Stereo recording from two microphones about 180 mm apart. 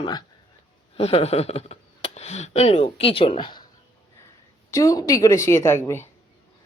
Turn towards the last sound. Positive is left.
turn(degrees=15)  # may be behind; listen again after turning